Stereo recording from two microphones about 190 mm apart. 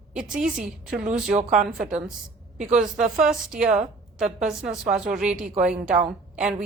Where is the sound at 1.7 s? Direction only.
5° right (ahead or behind).